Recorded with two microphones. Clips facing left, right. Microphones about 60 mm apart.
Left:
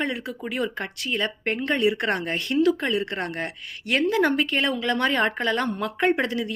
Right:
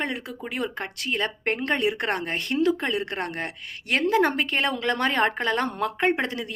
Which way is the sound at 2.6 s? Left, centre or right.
Right.